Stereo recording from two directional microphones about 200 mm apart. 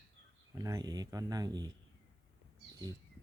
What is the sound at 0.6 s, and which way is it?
Speech, 20° right (ahead or behind).